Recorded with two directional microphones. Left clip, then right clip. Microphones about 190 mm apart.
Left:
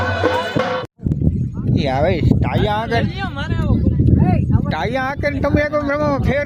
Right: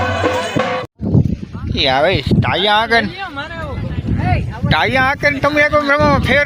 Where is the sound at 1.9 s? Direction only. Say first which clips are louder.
Right 4 dB; centre (ahead or behind).